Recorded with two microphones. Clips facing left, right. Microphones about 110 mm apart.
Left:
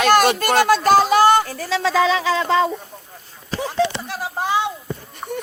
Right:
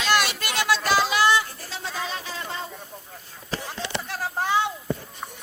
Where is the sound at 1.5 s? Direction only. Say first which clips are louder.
Left 14 dB; 90° left.